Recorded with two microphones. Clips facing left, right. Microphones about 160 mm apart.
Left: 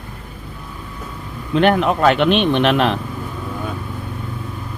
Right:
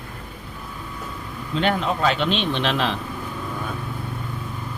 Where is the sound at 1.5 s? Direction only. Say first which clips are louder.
Left 7 dB; 60° left (ahead or behind).